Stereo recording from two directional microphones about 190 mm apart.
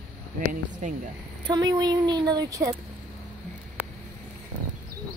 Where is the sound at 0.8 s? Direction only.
40° right (ahead or behind).